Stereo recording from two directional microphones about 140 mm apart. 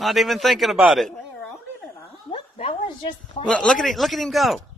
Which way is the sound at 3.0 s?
35° left (ahead or behind).